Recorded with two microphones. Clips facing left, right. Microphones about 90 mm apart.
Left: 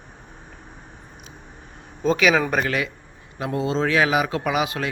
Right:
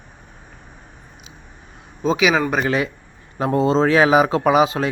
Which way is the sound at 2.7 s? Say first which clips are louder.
Right 4 dB; 30° right (ahead or behind).